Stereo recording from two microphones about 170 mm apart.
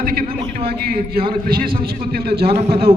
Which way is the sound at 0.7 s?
65° right (ahead or behind).